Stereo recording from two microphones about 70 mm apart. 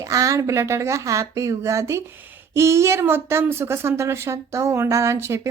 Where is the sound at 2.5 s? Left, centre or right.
Right.